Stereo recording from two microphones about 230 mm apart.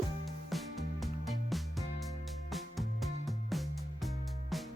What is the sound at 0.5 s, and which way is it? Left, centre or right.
Music, centre.